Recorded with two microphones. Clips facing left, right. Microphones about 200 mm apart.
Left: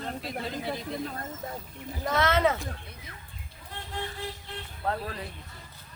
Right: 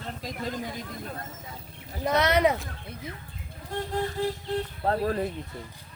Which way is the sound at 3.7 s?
40° right (ahead or behind).